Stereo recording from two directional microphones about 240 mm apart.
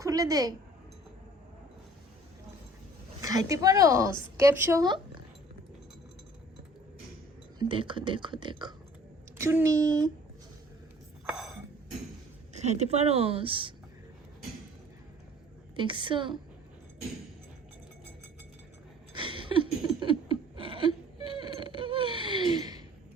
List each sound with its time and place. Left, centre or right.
0.0 s a woman's voice: centre
3.2 s speech: centre
7.6 s speech: right
11.3 s a sound: centre
12.5 s speech: right
15.7 s speech: centre
19.1 s a sound: right